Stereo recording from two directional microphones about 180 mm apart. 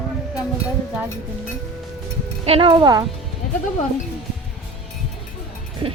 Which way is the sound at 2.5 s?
30° right (ahead or behind).